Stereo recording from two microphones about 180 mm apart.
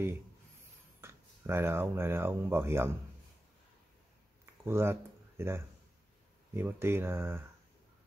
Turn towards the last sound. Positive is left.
turn(degrees=-15)  # may be behind; listen again after turning